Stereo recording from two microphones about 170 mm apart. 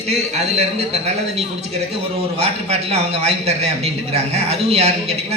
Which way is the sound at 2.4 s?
40° right (ahead or behind).